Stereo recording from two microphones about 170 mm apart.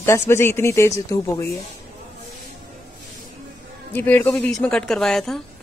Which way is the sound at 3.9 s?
10° left (ahead or behind).